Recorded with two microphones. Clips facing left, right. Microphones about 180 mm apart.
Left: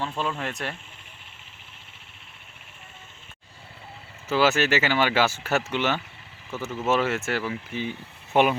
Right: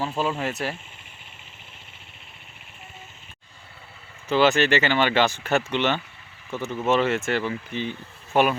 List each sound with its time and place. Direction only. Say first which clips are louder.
0.0 s speech: right 3 dB; 5° right (ahead or behind)
4.3 s speech: right 2 dB; 5° left (ahead or behind)